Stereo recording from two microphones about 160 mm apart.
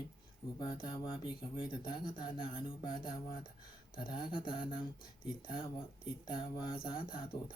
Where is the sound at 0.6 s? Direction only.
30° left (ahead or behind).